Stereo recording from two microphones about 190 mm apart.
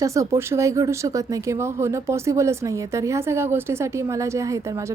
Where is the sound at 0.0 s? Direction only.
15° right (ahead or behind).